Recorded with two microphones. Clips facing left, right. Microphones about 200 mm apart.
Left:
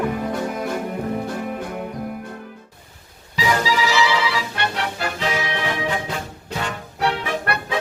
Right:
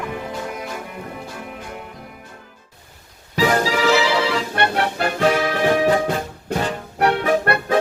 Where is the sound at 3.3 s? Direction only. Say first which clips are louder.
Right 3 dB; 50° right (ahead or behind).